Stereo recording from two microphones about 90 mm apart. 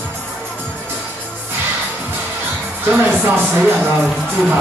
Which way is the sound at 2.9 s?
20° right (ahead or behind).